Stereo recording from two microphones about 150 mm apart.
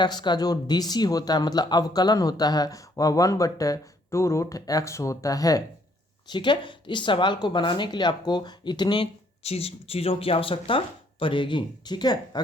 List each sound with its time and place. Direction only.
0.0 s speech: 30° left (ahead or behind)
9.4 s speech: 45° left (ahead or behind)